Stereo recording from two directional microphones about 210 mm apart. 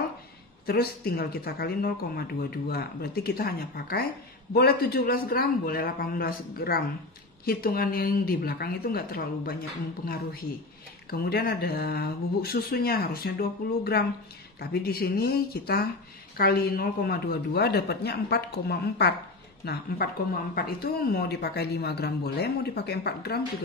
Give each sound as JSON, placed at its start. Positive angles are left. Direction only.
{"t": 0.7, "sound": "speech", "side_deg": 45}